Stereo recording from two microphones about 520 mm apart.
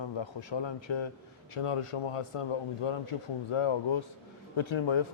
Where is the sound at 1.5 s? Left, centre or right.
Left.